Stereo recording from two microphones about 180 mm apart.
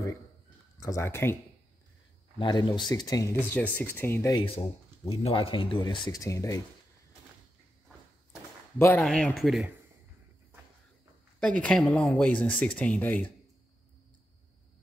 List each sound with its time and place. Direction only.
0.7 s speech: 15° left (ahead or behind)
2.3 s speech: 25° left (ahead or behind)
3.5 s speech: 10° left (ahead or behind)
4.4 s speech: 30° left (ahead or behind)
8.7 s speech: 15° left (ahead or behind)
11.3 s speech: 5° left (ahead or behind)